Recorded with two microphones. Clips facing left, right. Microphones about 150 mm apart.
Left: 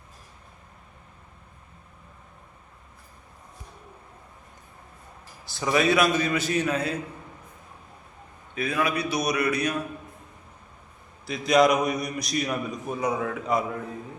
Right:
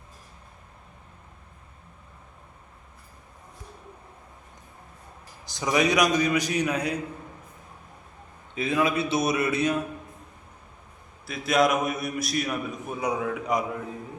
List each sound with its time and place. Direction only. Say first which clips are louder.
5.5 s a man's voice: left 1 dB; 15° right (ahead or behind)
8.5 s a man's voice: right 2 dB; 25° right (ahead or behind)
11.3 s a man's voice: left 3 dB; centre (ahead or behind)